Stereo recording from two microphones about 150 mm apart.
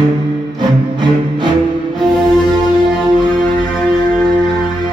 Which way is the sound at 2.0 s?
Centre (ahead or behind).